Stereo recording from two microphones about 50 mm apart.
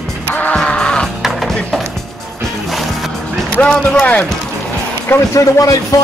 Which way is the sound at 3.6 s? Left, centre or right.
Centre.